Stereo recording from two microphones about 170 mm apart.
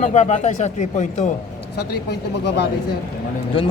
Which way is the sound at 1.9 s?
70° left (ahead or behind).